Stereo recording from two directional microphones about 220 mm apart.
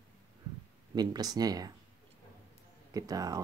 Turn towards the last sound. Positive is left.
turn(degrees=-15)  # may be behind; listen again after turning